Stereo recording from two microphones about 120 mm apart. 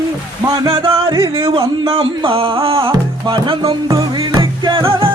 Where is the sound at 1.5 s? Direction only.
50° right (ahead or behind).